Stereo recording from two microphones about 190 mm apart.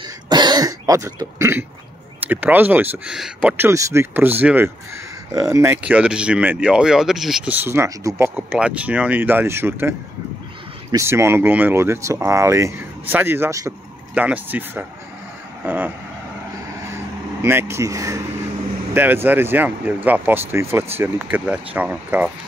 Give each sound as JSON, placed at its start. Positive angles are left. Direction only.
{"t": 0.3, "sound": "throat clearing", "side_deg": -20}
{"t": 2.1, "sound": "speech", "side_deg": -10}
{"t": 17.4, "sound": "speech", "side_deg": -15}